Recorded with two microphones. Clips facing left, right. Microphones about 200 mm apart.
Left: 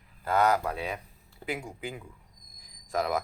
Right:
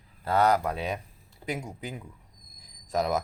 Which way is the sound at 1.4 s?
40° right (ahead or behind).